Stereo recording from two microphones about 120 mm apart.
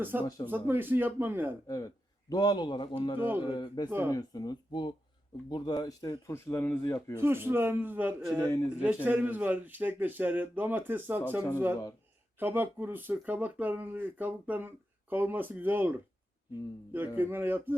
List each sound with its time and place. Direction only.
0.0 s speech: 15° right (ahead or behind)
1.6 s a man's voice: 30° left (ahead or behind)
3.2 s speech: 15° right (ahead or behind)
3.4 s speech: 35° left (ahead or behind)
3.8 s speech: 15° right (ahead or behind)
4.1 s speech: 30° left (ahead or behind)
6.3 s a man's voice: 20° left (ahead or behind)
7.2 s speech: 20° right (ahead or behind)
8.4 s a man's voice: 25° left (ahead or behind)
8.8 s speech: 15° right (ahead or behind)
17.2 s speech: 15° right (ahead or behind)